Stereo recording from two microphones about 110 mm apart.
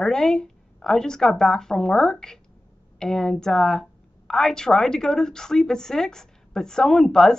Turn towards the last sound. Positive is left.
turn(degrees=5)  # may be behind; listen again after turning